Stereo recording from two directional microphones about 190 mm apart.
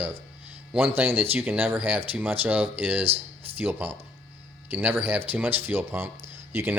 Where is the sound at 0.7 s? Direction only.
10° right (ahead or behind).